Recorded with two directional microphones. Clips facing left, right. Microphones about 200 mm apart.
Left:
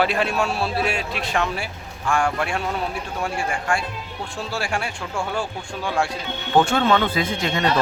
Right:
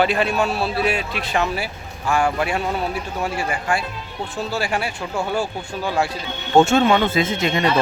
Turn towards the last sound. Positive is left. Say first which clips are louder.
# right 3 dB
turn(degrees=-20)  # may be behind; listen again after turning